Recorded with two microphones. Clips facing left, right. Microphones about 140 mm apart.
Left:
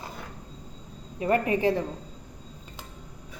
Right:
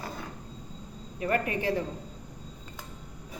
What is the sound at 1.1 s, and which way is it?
Speech, 25° left (ahead or behind).